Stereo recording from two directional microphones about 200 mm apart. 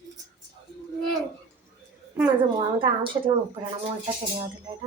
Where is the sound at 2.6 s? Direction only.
25° right (ahead or behind).